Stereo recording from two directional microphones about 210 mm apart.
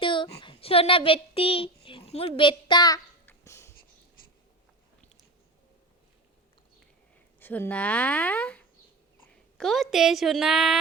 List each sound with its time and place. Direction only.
0.0 s speech: 25° left (ahead or behind)
3.2 s a sound: 15° left (ahead or behind)
7.3 s a woman's voice: 10° left (ahead or behind)